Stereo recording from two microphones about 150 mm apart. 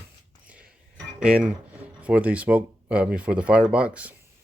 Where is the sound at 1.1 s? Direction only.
5° right (ahead or behind).